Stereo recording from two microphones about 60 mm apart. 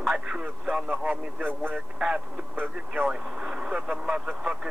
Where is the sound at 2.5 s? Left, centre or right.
Right.